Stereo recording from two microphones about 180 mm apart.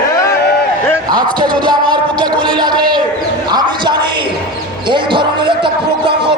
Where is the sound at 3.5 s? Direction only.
25° right (ahead or behind).